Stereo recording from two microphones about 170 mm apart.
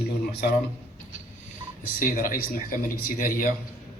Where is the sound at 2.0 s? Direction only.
55° left (ahead or behind).